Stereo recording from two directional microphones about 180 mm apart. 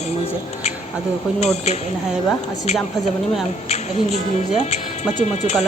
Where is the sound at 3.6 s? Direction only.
35° left (ahead or behind).